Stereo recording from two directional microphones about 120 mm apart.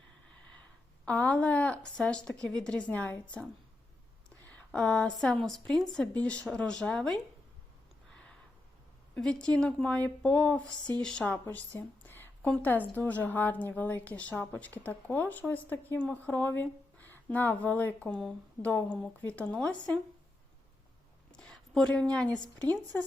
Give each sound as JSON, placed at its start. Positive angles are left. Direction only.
{"t": 1.0, "sound": "a woman's voice", "side_deg": 10}
{"t": 4.5, "sound": "a woman's voice", "side_deg": 10}
{"t": 9.4, "sound": "a woman's voice", "side_deg": 10}
{"t": 11.4, "sound": "a sound", "side_deg": 15}
{"t": 12.5, "sound": "a woman's voice", "side_deg": 15}
{"t": 21.3, "sound": "a woman's voice", "side_deg": 5}